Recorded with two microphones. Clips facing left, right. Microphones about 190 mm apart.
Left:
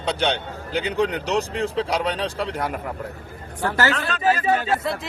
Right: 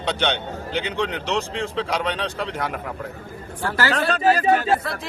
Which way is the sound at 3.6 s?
20° left (ahead or behind).